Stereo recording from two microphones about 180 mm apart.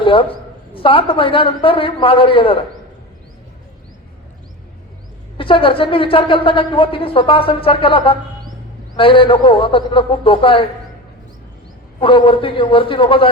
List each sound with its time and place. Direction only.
0.0 s a sound: 30° left (ahead or behind)
0.7 s a woman's voice: 30° left (ahead or behind)
5.4 s a woman's voice: 30° left (ahead or behind)
11.9 s a woman's voice: 30° left (ahead or behind)